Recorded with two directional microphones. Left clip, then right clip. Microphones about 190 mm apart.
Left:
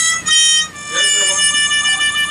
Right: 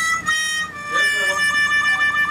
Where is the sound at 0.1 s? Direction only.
35° right (ahead or behind).